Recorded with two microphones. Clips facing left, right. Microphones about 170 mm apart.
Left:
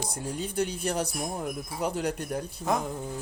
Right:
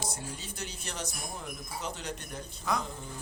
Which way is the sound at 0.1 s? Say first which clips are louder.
Left 8 dB; 55° left (ahead or behind).